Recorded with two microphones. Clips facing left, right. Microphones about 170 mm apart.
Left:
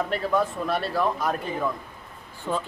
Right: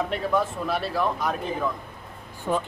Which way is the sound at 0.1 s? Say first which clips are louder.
Even; centre (ahead or behind).